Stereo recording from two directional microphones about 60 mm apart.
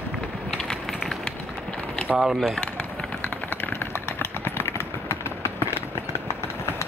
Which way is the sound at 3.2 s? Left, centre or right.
Left.